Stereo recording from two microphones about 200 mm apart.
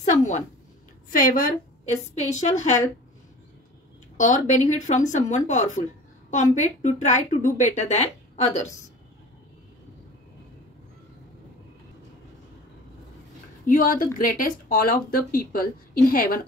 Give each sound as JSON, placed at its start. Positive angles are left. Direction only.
{"t": 1.1, "sound": "speech", "side_deg": 40}
{"t": 4.2, "sound": "speech", "side_deg": 40}
{"t": 13.7, "sound": "speech", "side_deg": 45}